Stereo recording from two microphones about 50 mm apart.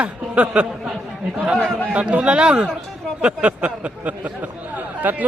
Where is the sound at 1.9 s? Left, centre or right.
Right.